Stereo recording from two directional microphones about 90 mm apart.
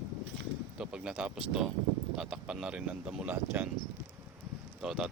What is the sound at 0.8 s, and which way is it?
Speech, 10° right (ahead or behind).